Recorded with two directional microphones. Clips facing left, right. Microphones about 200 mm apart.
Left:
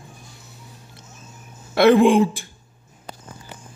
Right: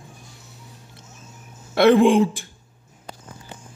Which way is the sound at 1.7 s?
10° left (ahead or behind).